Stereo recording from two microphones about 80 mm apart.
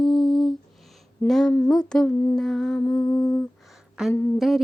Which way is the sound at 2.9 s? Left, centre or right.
Left.